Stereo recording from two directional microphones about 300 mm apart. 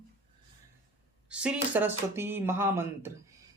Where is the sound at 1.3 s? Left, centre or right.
Centre.